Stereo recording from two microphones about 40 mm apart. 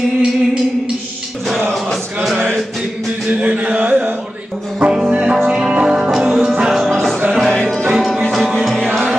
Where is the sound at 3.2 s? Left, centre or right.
Right.